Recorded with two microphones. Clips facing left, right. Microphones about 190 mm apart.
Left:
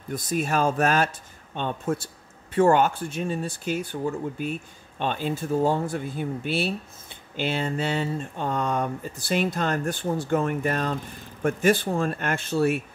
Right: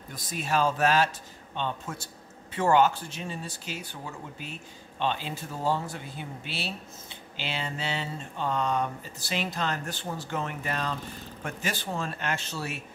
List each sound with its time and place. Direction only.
0.1 s speech: 50° left (ahead or behind)